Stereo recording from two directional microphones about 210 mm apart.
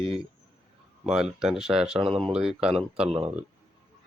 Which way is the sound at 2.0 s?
25° right (ahead or behind).